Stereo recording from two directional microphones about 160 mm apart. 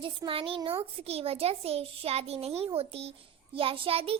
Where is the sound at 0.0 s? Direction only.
30° right (ahead or behind).